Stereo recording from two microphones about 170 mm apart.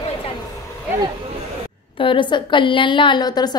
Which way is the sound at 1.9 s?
30° left (ahead or behind).